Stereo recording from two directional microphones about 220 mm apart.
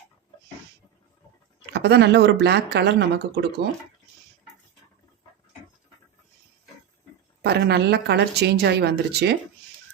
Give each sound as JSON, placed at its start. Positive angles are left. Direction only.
{"t": 1.7, "sound": "speech", "side_deg": -50}
{"t": 7.4, "sound": "speech", "side_deg": -50}